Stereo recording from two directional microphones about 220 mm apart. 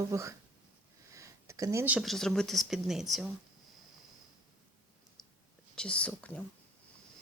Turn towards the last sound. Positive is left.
turn(degrees=5)  # may be behind; listen again after turning